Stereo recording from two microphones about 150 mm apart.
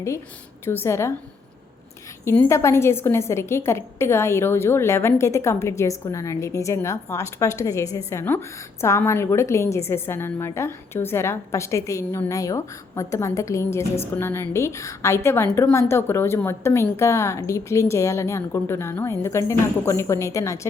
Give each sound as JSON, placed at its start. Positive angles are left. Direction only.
{"t": 0.6, "sound": "a woman's voice", "side_deg": 15}
{"t": 2.2, "sound": "a woman's voice", "side_deg": 15}